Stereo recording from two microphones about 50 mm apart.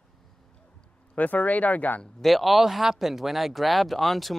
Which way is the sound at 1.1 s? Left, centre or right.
Left.